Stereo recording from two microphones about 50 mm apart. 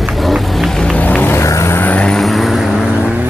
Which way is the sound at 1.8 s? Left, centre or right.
Left.